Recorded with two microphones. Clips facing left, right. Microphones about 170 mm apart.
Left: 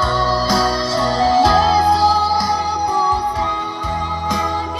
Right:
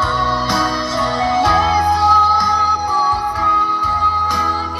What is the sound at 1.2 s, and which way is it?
Music, 35° left (ahead or behind).